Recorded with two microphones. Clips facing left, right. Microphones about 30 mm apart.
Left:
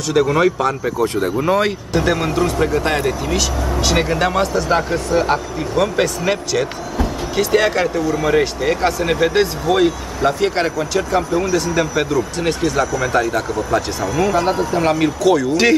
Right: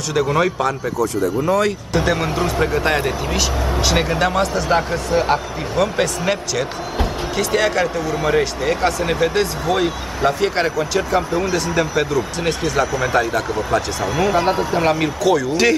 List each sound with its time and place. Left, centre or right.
0.1 s speech: centre
1.4 s speech: left
2.0 s speech: centre
14.0 s speech: centre
15.3 s speech: centre